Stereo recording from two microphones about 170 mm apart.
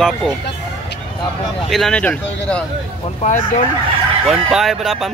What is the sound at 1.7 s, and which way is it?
Speech, 5° left (ahead or behind).